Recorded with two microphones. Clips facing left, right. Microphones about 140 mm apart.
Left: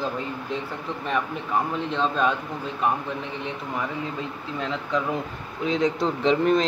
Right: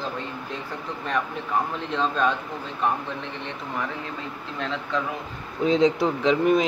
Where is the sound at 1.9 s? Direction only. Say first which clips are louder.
Right 1 dB; centre (ahead or behind).